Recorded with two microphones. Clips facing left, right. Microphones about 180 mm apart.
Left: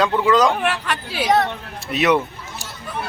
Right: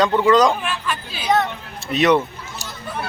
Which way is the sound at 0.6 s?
70° left (ahead or behind).